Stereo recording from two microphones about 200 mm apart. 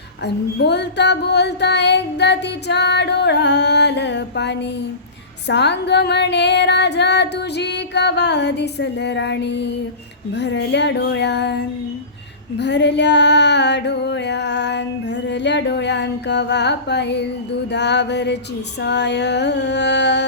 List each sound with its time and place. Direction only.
0.2 s female singing: 55° left (ahead or behind)